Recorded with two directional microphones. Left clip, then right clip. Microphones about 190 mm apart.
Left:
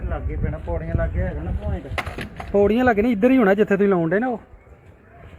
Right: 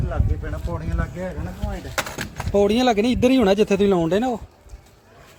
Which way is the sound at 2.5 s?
30° right (ahead or behind).